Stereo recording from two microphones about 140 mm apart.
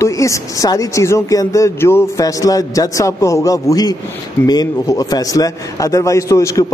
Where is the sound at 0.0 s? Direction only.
20° left (ahead or behind).